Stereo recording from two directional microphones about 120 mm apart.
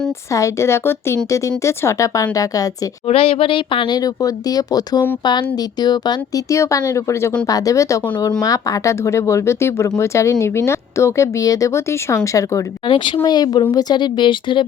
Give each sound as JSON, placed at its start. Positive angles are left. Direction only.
{"t": 0.3, "sound": "speech", "side_deg": 25}
{"t": 3.1, "sound": "speech", "side_deg": 55}
{"t": 12.8, "sound": "speech", "side_deg": 40}